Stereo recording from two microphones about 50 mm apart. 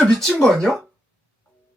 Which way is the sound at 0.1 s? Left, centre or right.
Centre.